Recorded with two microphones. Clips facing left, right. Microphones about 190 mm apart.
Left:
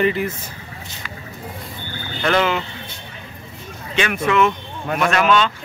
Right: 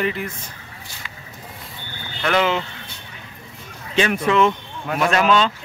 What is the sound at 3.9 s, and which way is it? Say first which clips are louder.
Speech: right 1 dB; 35° right (ahead or behind).